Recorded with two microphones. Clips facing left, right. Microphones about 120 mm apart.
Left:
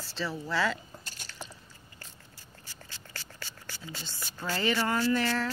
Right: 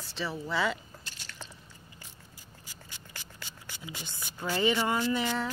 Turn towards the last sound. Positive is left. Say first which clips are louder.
# left 2 dB
turn(degrees=-15)  # may be behind; listen again after turning